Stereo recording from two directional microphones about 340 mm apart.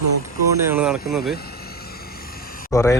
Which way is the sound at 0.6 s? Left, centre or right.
Centre.